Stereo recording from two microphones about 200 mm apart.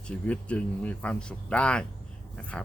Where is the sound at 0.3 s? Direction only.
5° left (ahead or behind).